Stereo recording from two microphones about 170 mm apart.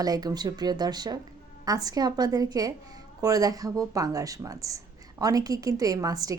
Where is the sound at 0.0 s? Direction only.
20° right (ahead or behind).